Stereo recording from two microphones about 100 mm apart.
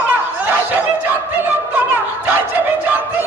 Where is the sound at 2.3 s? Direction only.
15° right (ahead or behind).